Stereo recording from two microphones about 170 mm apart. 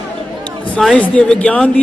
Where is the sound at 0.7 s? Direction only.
5° left (ahead or behind).